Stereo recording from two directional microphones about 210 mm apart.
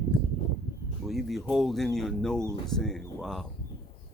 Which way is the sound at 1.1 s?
Centre (ahead or behind).